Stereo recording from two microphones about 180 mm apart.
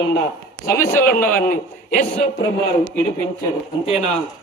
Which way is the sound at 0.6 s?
15° left (ahead or behind).